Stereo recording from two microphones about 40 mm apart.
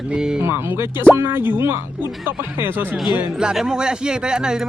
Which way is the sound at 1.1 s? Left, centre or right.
Right.